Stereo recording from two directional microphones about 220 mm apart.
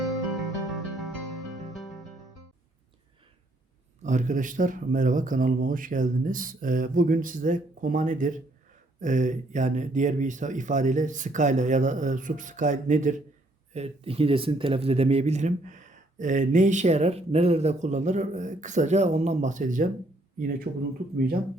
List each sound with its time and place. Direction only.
0.7 s music: centre (ahead or behind)
4.0 s speech: 35° right (ahead or behind)